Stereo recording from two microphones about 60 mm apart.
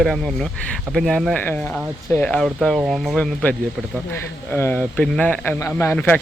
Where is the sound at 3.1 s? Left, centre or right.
Left.